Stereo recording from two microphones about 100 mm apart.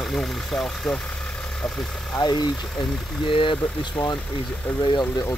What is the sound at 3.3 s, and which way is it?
Speech, 55° left (ahead or behind).